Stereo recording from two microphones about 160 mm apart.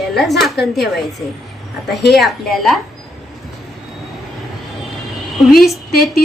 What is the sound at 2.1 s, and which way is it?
Speech, centre (ahead or behind).